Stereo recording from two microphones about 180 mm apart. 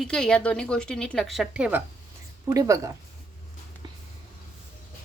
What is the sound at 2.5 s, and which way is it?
Speech, 20° right (ahead or behind).